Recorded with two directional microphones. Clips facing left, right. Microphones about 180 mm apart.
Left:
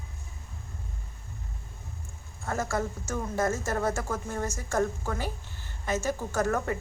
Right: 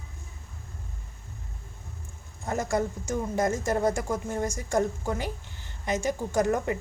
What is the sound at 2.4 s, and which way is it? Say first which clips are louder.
Speech: right 3 dB; 15° right (ahead or behind).